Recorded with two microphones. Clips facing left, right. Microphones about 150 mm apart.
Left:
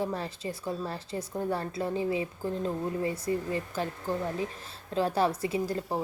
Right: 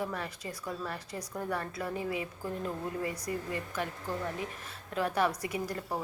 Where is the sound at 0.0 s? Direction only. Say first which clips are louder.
Left 4 dB; 30° left (ahead or behind).